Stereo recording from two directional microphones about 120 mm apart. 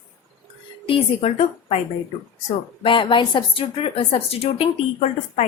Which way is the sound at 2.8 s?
45° left (ahead or behind).